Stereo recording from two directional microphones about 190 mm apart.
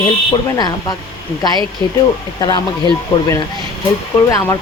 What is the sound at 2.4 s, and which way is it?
Speech, 20° left (ahead or behind).